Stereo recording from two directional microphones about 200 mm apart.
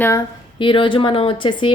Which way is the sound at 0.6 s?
25° left (ahead or behind).